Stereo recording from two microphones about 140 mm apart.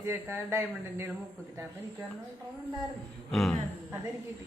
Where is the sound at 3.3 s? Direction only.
Centre (ahead or behind).